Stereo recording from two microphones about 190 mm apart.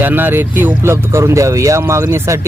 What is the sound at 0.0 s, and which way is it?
Speech, 10° right (ahead or behind).